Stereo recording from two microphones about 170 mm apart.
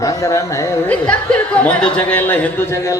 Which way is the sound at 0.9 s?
5° left (ahead or behind).